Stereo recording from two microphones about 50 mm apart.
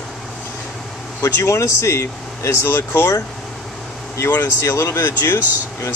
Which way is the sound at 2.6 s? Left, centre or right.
Left.